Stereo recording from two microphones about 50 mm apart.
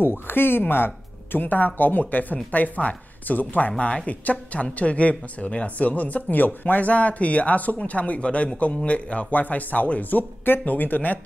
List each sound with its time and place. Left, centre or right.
0.0 s speech: left